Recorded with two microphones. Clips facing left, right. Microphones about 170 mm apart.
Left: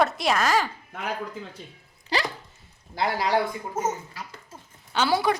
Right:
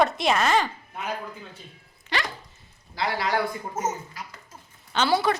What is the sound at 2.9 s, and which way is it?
Speech, 45° left (ahead or behind).